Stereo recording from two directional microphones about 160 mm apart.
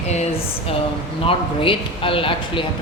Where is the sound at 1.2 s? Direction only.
35° left (ahead or behind).